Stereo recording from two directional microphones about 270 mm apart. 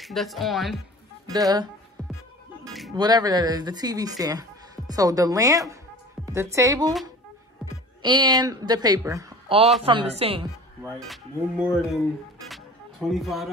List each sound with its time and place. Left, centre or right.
0.0 s speech: centre
1.2 s speech: centre
2.9 s speech: centre
8.0 s a woman's voice: centre
11.0 s speech: centre
13.1 s speech: centre